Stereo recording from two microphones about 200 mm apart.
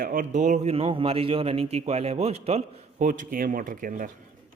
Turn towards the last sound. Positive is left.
turn(degrees=-40)  # may be behind; listen again after turning